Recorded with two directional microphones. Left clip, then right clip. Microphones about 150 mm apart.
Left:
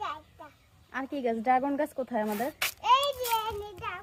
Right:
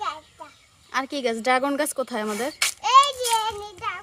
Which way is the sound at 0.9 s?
50° right (ahead or behind).